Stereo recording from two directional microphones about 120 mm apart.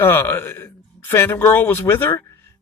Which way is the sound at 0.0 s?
20° left (ahead or behind).